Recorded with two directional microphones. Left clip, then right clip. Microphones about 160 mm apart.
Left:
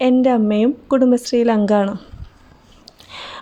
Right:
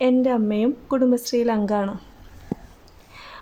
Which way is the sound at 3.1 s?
45° left (ahead or behind).